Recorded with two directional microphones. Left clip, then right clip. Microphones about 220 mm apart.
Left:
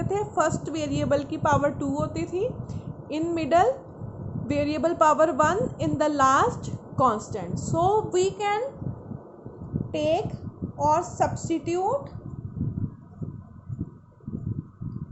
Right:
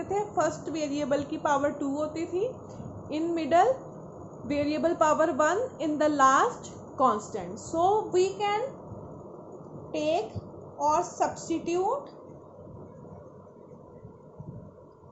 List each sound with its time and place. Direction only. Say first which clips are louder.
0.1 s a woman's voice: left 3 dB; 30° left (ahead or behind)
9.9 s a woman's voice: left 3 dB; 45° left (ahead or behind)